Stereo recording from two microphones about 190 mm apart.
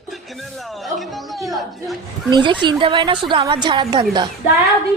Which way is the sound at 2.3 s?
25° right (ahead or behind).